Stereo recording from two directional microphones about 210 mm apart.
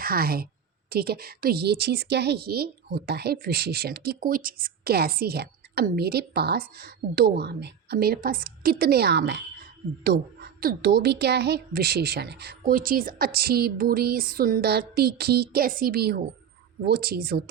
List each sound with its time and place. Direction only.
0.0 s a woman's voice: 45° right (ahead or behind)